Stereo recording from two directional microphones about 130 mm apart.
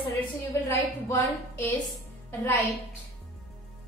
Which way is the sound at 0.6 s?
20° left (ahead or behind).